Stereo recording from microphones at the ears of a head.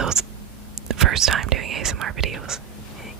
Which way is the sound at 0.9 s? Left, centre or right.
Right.